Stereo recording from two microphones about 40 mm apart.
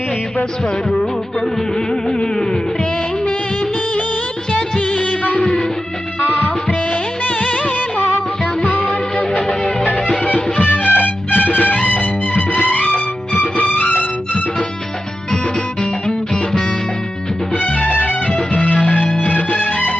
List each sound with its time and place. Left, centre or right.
0.9 s music: centre
4.8 s music of bollywood: left
6.3 s music: left
10.2 s music: left
17.5 s music: left
18.3 s music: left